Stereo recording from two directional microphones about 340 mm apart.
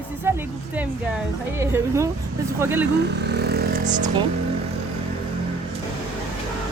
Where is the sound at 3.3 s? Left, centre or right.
Right.